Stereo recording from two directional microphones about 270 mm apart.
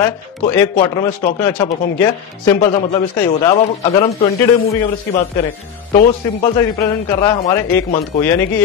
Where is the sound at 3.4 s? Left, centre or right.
Centre.